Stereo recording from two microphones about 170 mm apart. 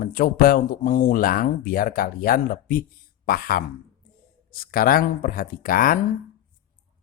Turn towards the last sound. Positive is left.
turn(degrees=55)  # may be behind; listen again after turning